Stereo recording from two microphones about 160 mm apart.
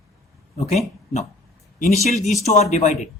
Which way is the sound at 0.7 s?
45° left (ahead or behind).